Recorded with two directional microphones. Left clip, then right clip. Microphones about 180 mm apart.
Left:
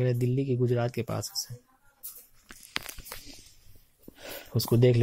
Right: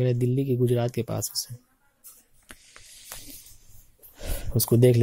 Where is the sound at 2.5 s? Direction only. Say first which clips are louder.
Right 2 dB; 15° right (ahead or behind).